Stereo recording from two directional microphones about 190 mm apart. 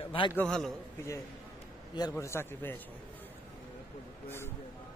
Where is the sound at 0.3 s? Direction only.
5° left (ahead or behind).